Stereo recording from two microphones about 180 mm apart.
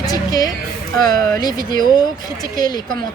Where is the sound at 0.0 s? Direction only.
20° left (ahead or behind).